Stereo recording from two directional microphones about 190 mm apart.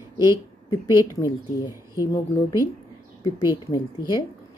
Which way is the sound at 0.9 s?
20° left (ahead or behind).